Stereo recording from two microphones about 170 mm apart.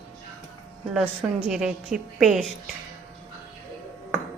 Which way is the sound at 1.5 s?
5° right (ahead or behind).